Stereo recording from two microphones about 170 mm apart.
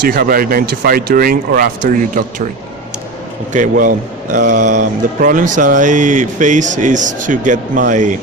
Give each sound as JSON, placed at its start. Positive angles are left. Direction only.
{"t": 0.0, "sound": "speech", "side_deg": -60}
{"t": 3.5, "sound": "a man's voice", "side_deg": -50}